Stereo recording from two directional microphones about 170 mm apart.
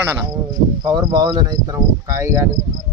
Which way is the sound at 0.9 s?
25° right (ahead or behind).